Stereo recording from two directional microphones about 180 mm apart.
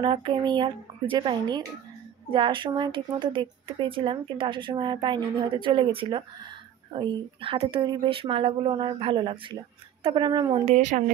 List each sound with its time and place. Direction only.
0.0 s speech: 25° right (ahead or behind)
10.6 s speech: 40° right (ahead or behind)